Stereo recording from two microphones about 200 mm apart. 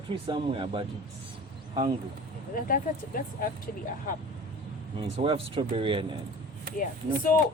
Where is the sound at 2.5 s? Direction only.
45° left (ahead or behind).